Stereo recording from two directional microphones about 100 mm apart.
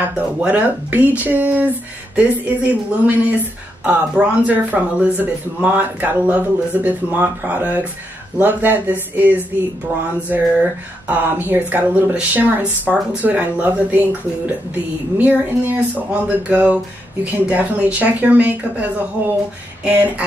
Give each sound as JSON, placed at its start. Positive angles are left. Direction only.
{"t": 0.4, "sound": "speech", "side_deg": -15}